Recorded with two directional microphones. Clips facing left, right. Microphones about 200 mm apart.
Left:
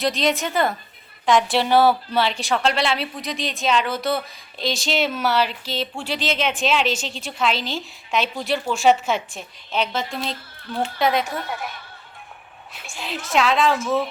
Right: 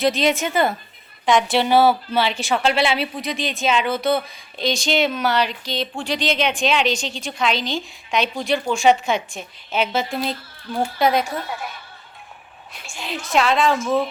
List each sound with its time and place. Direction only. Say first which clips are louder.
0.0 s a woman's voice: right 3 dB; centre (ahead or behind)
12.7 s a woman's voice: right 1 dB; centre (ahead or behind)